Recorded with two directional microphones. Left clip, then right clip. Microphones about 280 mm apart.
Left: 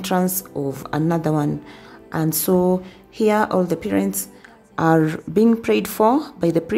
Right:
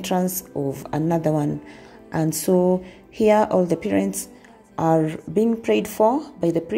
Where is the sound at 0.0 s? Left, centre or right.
Centre.